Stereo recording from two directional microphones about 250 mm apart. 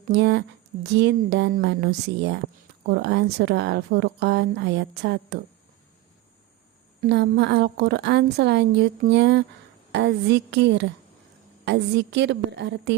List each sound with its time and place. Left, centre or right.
0.1 s a woman's voice: right
7.0 s a woman's voice: right